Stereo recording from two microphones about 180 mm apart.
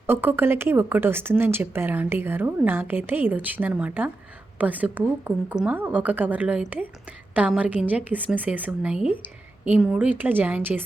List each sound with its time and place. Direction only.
0.1 s speech: 10° right (ahead or behind)